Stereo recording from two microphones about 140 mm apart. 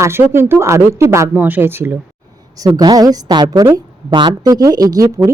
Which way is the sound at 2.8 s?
25° right (ahead or behind).